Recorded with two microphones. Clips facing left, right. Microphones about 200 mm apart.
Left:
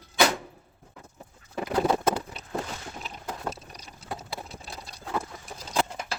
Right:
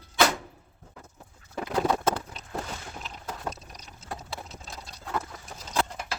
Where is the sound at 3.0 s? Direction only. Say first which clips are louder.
Left 2 dB; 5° left (ahead or behind).